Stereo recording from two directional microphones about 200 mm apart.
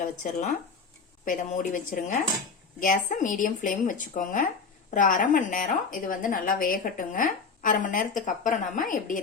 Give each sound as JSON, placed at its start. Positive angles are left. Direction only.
{"t": 0.0, "sound": "speech", "side_deg": 35}